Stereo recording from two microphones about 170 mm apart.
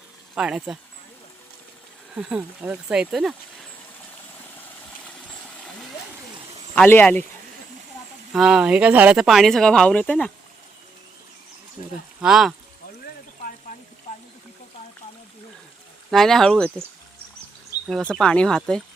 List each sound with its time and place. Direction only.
0.3 s speech: 5° right (ahead or behind)
2.1 s speech: 5° right (ahead or behind)
6.7 s speech: 10° left (ahead or behind)
8.3 s speech: 5° right (ahead or behind)
12.2 s speech: centre (ahead or behind)
16.0 s speech: centre (ahead or behind)
17.7 s a sound: 20° left (ahead or behind)
18.1 s speech: 5° left (ahead or behind)